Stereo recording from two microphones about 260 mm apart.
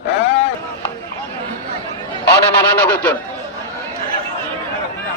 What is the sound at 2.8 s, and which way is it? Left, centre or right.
Speech, centre.